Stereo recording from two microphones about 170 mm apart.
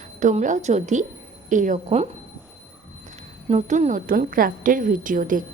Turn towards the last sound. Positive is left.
turn(degrees=-50)  # may be behind; listen again after turning